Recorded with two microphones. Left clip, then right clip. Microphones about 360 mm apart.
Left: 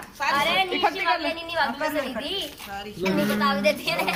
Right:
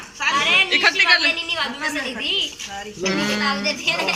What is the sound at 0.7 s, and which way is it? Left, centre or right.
Speech, centre.